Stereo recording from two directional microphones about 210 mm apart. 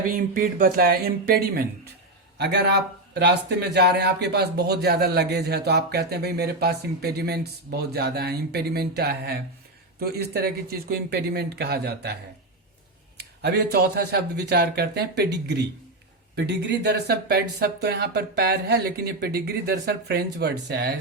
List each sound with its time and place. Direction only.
0.1 s speech: 40° right (ahead or behind)
13.1 s speech: 50° right (ahead or behind)